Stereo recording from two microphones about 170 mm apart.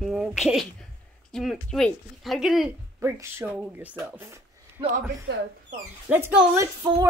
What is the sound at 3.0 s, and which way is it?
Speech, 15° right (ahead or behind).